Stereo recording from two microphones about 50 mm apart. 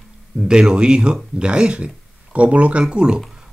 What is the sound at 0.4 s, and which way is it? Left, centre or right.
Speech, centre.